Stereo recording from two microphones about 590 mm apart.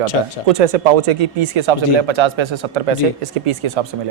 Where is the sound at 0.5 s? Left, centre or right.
Right.